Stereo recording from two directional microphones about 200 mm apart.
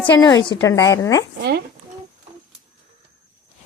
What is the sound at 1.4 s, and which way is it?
Speech, 55° right (ahead or behind).